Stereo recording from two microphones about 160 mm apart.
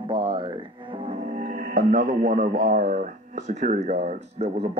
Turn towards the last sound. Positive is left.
turn(degrees=-40)  # may be behind; listen again after turning